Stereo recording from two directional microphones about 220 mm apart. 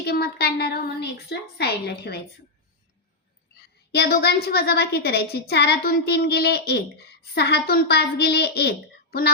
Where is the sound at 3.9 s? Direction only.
45° left (ahead or behind).